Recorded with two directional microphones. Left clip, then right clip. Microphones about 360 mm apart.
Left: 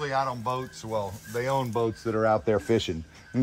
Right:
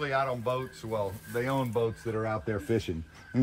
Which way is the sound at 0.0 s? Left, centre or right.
Centre.